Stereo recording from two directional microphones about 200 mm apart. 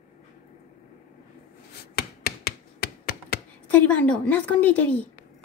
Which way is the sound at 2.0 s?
50° left (ahead or behind).